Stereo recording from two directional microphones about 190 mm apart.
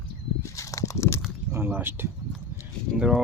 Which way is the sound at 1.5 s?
10° right (ahead or behind).